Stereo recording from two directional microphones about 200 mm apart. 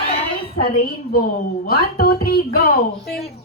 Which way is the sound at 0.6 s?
45° left (ahead or behind).